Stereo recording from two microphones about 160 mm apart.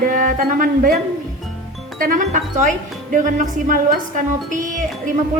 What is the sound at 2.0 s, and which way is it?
Speech, 55° right (ahead or behind).